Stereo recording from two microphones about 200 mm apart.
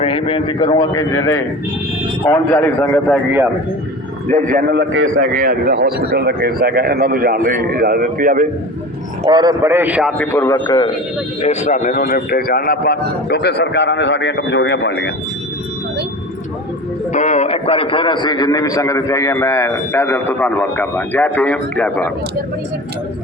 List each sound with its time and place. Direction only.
0.0 s a man's voice: 25° left (ahead or behind)
4.3 s a man's voice: 40° right (ahead or behind)
4.7 s a man's voice: 70° right (ahead or behind)
5.2 s speech: 45° right (ahead or behind)
9.2 s a man's voice: 20° right (ahead or behind)
10.2 s a man's voice: 15° left (ahead or behind)
11.4 s a man's voice: 35° left (ahead or behind); by 15.1 s 60° left (ahead or behind)
17.1 s a man's voice: 35° left (ahead or behind); by 22.1 s 5° left (ahead or behind)